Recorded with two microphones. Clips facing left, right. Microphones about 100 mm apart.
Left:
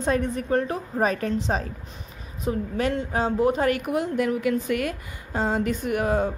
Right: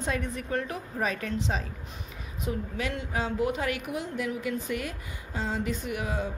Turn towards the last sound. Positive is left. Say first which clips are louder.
# left 9 dB
turn(degrees=50)  # may be behind; listen again after turning